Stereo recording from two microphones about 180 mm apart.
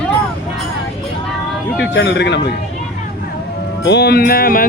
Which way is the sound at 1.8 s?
75° left (ahead or behind).